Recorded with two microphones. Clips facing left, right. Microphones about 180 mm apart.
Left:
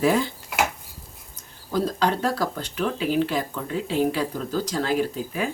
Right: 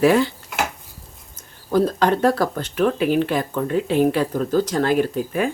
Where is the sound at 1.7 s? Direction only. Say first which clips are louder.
Right 5 dB; 55° right (ahead or behind).